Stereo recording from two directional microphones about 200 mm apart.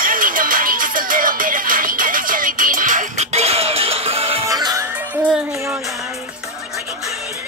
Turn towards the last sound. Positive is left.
turn(degrees=-10)  # may be behind; listen again after turning